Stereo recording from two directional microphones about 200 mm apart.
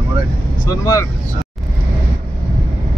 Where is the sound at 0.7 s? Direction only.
15° left (ahead or behind).